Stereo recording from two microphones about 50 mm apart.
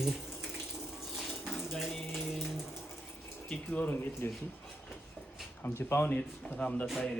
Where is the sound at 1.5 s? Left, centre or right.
Centre.